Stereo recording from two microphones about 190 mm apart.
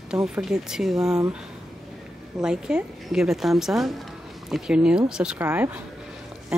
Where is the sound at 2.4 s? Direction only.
5° right (ahead or behind).